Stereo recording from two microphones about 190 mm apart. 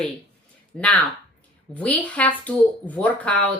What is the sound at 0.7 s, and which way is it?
Speech, 5° left (ahead or behind).